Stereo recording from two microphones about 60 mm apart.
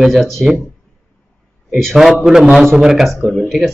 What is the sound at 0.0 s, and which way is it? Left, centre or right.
Speech, centre.